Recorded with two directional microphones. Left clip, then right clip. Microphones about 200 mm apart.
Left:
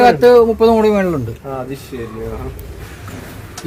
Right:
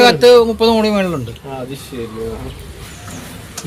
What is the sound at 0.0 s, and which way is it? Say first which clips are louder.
Speech: even; 55° left (ahead or behind).